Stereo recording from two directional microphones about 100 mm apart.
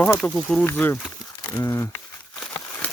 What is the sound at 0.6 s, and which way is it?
Speech, 25° left (ahead or behind).